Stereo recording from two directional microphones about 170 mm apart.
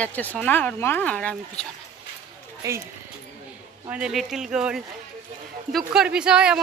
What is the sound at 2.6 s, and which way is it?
Speech, 20° right (ahead or behind).